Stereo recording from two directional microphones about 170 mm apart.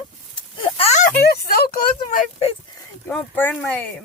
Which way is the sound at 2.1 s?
35° left (ahead or behind).